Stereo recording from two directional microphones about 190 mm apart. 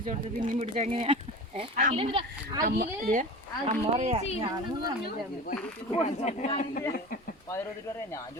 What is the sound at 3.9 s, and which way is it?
Speech, 30° right (ahead or behind).